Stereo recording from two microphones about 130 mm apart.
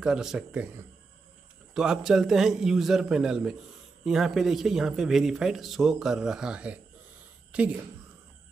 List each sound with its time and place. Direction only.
0.0 s speech: 5° right (ahead or behind)
1.7 s a woman's voice: 5° right (ahead or behind)